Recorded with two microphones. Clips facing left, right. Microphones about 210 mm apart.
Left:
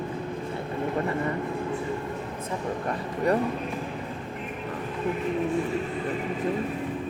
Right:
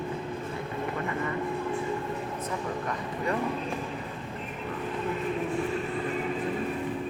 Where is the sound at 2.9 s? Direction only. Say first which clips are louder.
Left 8 dB; 40° left (ahead or behind).